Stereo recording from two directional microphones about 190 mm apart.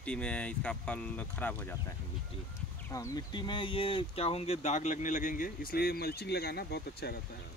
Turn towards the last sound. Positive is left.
turn(degrees=55)  # may be behind; listen again after turning